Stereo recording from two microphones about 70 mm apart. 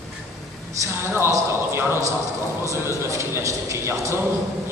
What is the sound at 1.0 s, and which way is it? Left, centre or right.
A man's voice, right.